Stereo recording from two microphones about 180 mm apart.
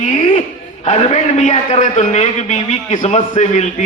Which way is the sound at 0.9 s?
40° left (ahead or behind).